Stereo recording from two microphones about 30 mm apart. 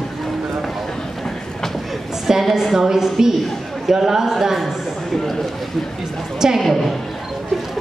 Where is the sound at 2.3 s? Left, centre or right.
Centre.